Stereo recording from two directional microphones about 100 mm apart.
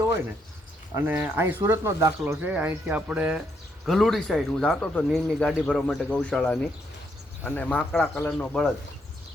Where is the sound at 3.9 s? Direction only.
Centre (ahead or behind).